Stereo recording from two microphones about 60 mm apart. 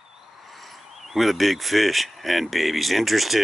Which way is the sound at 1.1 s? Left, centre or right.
Centre.